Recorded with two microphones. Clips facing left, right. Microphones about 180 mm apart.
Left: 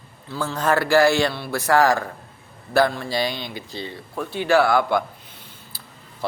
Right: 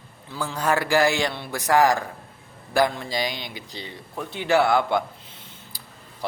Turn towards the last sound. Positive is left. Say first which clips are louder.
# left 3 dB
turn(degrees=-20)  # may be behind; listen again after turning